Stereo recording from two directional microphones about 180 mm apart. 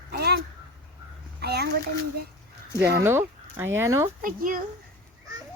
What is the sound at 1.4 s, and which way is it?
Speech, 65° right (ahead or behind).